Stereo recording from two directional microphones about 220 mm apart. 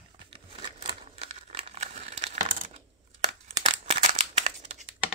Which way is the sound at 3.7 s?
30° right (ahead or behind).